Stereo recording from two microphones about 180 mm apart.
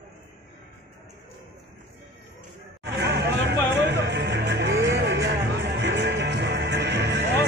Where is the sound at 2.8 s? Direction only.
65° right (ahead or behind).